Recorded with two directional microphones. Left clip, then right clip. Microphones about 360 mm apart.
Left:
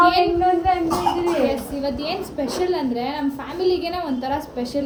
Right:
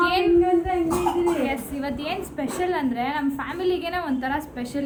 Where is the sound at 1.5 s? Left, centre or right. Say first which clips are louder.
Left 4 dB; centre.